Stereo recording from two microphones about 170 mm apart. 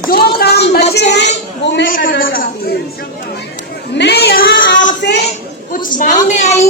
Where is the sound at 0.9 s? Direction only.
90° left.